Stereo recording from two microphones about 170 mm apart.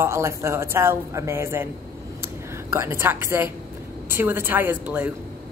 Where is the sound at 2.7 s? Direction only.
15° right (ahead or behind).